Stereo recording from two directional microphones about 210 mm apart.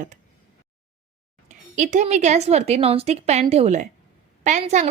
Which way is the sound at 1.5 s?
35° right (ahead or behind).